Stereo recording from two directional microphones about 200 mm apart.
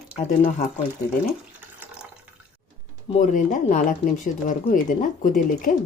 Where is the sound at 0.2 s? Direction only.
40° left (ahead or behind).